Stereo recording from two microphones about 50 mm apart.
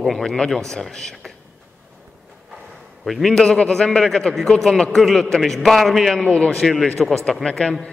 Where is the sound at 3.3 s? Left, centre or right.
Centre.